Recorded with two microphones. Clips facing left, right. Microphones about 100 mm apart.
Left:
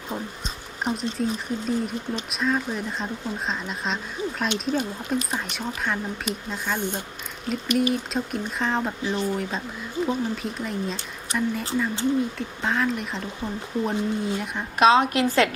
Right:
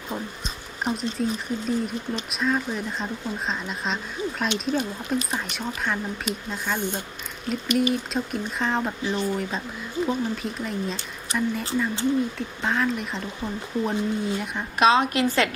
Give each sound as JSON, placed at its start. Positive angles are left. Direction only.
{"t": 0.9, "sound": "speech", "side_deg": 0}
{"t": 14.8, "sound": "a woman's voice", "side_deg": 80}